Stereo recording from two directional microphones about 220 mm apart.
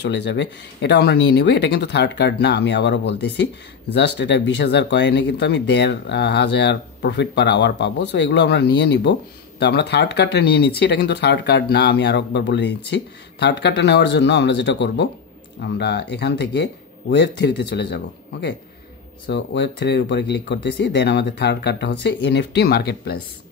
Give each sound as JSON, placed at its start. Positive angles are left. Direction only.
{"t": 0.0, "sound": "speech", "side_deg": 50}